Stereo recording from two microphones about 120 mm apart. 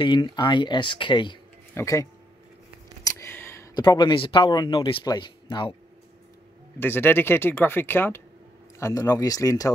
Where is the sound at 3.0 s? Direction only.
20° left (ahead or behind).